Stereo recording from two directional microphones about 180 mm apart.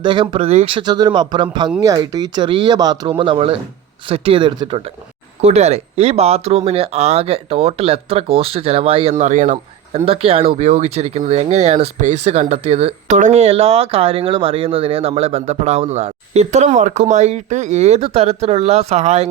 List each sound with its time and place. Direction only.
0.0 s speech: 25° right (ahead or behind); by 10.0 s 45° right (ahead or behind)
10.1 s speech: 30° right (ahead or behind)